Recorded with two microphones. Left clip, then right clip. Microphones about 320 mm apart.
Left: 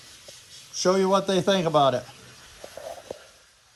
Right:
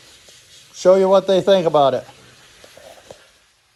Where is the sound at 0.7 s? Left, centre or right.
Centre.